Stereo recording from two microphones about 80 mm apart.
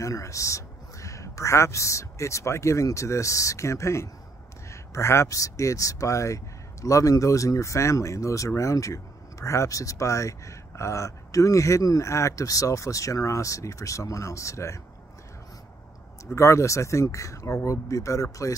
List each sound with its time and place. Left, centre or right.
0.0 s speech: left
16.3 s speech: left